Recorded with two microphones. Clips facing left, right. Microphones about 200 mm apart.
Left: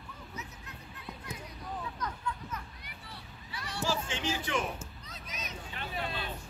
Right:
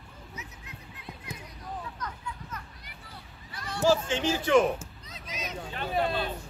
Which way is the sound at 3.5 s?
50° right (ahead or behind).